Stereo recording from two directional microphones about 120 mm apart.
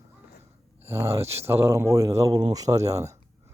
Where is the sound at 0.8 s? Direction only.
20° right (ahead or behind).